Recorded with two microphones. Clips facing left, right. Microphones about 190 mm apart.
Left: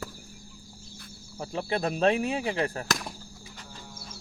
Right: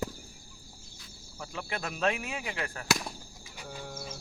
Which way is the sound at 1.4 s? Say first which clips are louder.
Left 8 dB; 35° left (ahead or behind).